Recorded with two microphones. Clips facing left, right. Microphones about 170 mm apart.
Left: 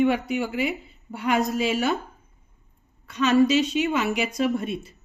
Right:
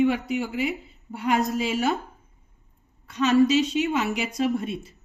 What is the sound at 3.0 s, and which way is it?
A woman's voice, 65° left (ahead or behind).